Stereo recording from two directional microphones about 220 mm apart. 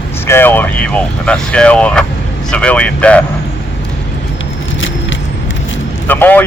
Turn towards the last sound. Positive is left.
turn(degrees=10)  # may be behind; listen again after turning